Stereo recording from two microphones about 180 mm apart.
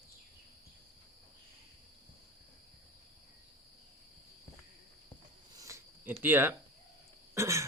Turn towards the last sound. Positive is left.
turn(degrees=-15)  # may be behind; listen again after turning